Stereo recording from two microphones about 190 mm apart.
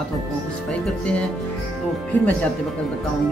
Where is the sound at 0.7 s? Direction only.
5° left (ahead or behind).